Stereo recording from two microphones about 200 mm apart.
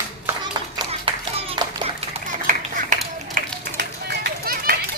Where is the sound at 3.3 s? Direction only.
50° right (ahead or behind).